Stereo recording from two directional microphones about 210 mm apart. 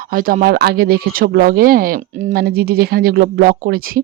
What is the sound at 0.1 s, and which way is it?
Speech, 40° right (ahead or behind).